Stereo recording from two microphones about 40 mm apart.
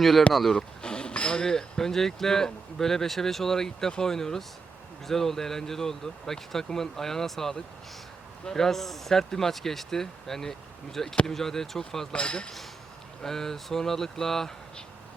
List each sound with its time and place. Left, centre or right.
0.0 s speech: centre
0.5 s speech: left
12.1 s speech: left
13.2 s speech: centre